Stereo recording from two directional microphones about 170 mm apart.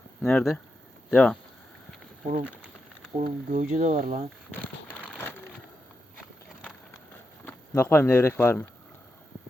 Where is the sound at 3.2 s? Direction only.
45° right (ahead or behind).